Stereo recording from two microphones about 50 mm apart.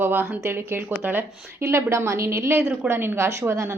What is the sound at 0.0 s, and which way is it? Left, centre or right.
Speech, right.